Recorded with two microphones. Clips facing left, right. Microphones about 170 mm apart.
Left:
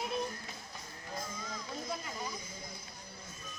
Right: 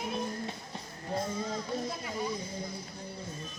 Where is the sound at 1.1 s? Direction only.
30° right (ahead or behind).